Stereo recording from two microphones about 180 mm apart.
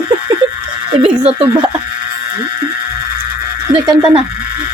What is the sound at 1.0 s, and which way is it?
Speech, 30° right (ahead or behind).